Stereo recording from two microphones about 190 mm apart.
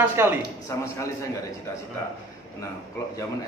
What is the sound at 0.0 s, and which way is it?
Speech, 10° right (ahead or behind).